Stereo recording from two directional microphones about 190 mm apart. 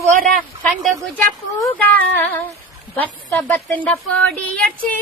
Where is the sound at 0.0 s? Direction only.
40° right (ahead or behind).